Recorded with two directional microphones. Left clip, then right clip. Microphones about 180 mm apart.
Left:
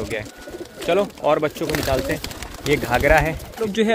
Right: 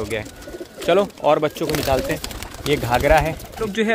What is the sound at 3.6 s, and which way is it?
Speech, 15° left (ahead or behind).